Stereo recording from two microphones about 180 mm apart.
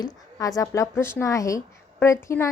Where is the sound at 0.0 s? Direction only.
20° left (ahead or behind).